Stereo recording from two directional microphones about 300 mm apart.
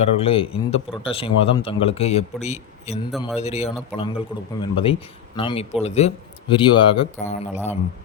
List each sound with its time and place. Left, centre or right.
0.0 s a man's voice: centre
3.1 s speech: centre
3.4 s a man's voice: left